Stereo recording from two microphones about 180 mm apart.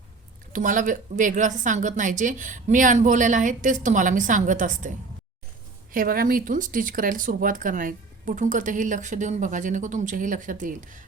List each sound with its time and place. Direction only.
0.5 s speech: 45° right (ahead or behind)
5.9 s speech: 50° right (ahead or behind)